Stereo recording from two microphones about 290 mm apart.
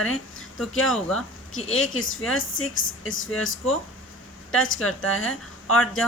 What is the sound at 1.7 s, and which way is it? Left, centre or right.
Speech, left.